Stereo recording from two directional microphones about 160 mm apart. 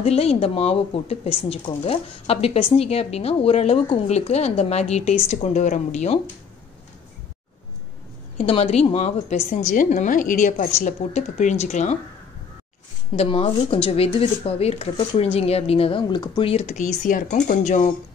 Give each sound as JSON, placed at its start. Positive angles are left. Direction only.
{"t": 0.0, "sound": "a woman's voice", "side_deg": 40}
{"t": 8.4, "sound": "a woman's voice", "side_deg": 40}
{"t": 13.1, "sound": "speech", "side_deg": 40}